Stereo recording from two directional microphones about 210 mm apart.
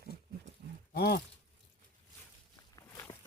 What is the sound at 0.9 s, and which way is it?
Speech, 50° left (ahead or behind).